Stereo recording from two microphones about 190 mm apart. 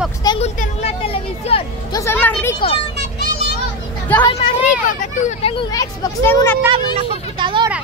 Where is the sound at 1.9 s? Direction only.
10° left (ahead or behind).